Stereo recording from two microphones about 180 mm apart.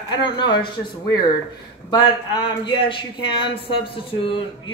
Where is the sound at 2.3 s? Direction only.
25° left (ahead or behind).